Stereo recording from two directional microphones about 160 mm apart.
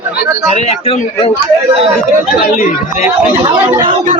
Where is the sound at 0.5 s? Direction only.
40° left (ahead or behind).